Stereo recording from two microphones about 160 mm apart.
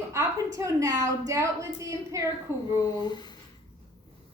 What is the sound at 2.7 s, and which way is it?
Speech, 25° left (ahead or behind).